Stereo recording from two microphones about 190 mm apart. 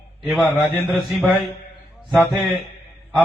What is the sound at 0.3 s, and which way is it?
A man's voice, centre (ahead or behind).